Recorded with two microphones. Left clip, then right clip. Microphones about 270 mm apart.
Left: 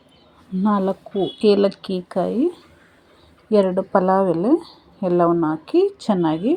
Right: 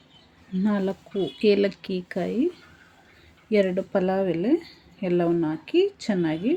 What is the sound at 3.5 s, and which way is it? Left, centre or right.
A woman's voice, centre.